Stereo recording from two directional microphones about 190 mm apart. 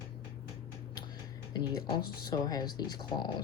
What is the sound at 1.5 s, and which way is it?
Speech, 25° left (ahead or behind).